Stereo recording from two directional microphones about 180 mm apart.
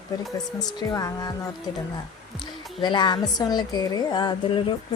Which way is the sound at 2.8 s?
25° left (ahead or behind).